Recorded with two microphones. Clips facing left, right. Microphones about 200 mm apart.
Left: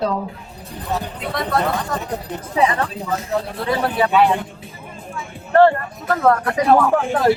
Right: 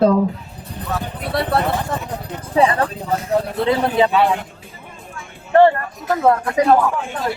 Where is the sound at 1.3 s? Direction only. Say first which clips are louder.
Right 2 dB; 30° right (ahead or behind).